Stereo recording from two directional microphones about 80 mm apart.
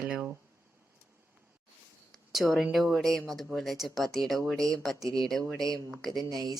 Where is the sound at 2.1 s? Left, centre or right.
Centre.